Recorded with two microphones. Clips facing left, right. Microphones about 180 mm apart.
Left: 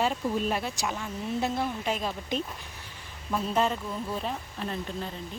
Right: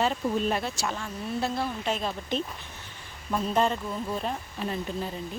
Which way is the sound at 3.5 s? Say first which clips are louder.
Right 2 dB; 5° left (ahead or behind).